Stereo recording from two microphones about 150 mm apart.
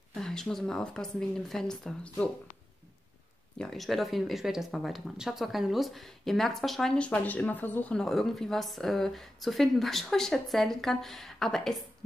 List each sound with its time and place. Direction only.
0.1 s speech: 5° left (ahead or behind)
3.5 s speech: 5° left (ahead or behind)